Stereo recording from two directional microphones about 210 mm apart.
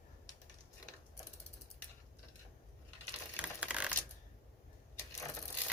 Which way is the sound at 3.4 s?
5° right (ahead or behind).